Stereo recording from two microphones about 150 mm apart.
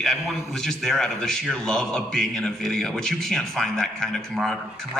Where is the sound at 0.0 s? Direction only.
Centre (ahead or behind).